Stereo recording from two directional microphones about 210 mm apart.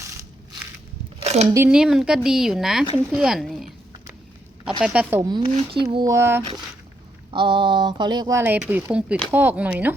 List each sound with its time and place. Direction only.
1.2 s a sound: 30° right (ahead or behind)
1.5 s a woman's voice: 5° right (ahead or behind)
4.8 s a woman's voice: 5° right (ahead or behind)
5.3 s speech: 20° right (ahead or behind)
7.3 s speech: 25° right (ahead or behind); by 9.9 s 5° right (ahead or behind)